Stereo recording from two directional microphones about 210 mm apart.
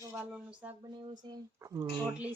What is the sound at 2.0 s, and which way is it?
Speech, 5° right (ahead or behind).